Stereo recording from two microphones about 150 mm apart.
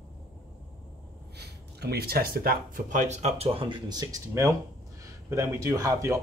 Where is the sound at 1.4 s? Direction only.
90° right.